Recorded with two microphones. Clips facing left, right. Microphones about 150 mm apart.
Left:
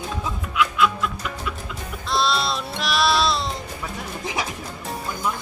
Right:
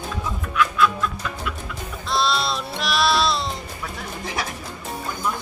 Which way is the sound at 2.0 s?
Centre (ahead or behind).